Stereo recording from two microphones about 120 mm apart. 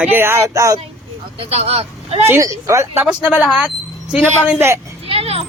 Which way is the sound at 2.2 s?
25° right (ahead or behind).